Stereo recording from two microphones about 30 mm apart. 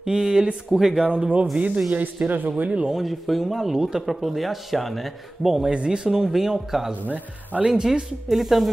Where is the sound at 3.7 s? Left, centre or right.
Right.